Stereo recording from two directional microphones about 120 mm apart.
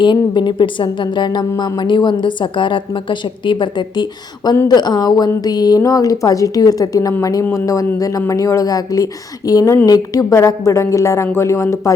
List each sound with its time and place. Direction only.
0.0 s a woman's voice: 40° left (ahead or behind)